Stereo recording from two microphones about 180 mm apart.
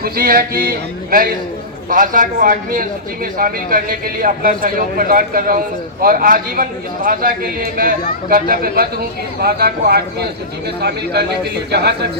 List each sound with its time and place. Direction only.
0.0 s a man's voice: 55° right (ahead or behind)